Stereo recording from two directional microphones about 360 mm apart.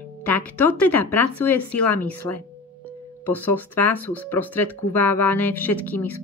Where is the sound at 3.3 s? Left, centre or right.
Centre.